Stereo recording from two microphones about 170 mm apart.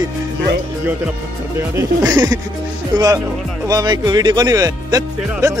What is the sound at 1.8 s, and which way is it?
Speech, 20° right (ahead or behind).